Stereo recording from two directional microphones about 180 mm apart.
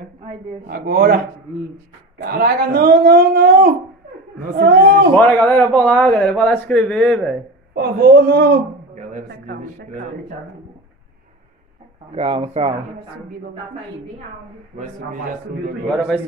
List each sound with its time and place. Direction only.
0.7 s speech: 60° right (ahead or behind)
5.1 s a man's voice: 10° left (ahead or behind)
7.7 s speech: 65° right (ahead or behind)
12.1 s speech: 30° right (ahead or behind)